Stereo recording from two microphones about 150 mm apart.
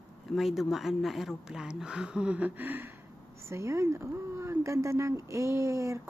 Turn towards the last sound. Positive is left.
turn(degrees=-20)  # may be behind; listen again after turning